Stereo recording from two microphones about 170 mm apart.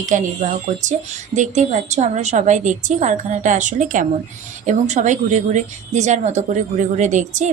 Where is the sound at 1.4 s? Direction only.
45° right (ahead or behind).